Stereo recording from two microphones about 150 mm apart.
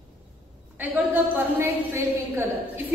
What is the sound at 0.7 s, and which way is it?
A woman's voice, 10° right (ahead or behind).